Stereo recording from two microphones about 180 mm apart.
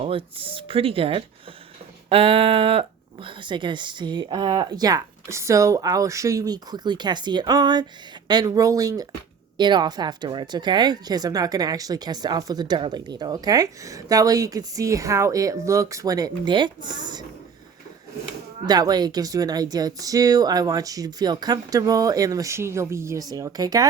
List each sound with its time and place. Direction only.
0.0 s speech: 30° right (ahead or behind)
18.6 s speech: 20° right (ahead or behind)